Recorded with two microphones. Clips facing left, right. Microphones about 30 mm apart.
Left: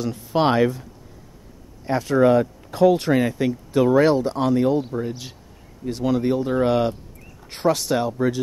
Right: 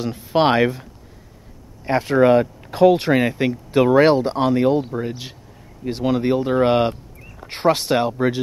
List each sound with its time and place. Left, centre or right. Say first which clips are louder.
0.0 s speech: right 3 dB; right
1.9 s speech: right 2 dB; right